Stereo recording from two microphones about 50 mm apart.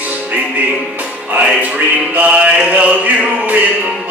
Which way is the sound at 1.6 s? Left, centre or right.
Right.